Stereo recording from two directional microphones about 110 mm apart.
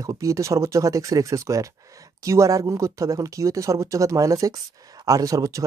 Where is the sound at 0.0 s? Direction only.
30° right (ahead or behind).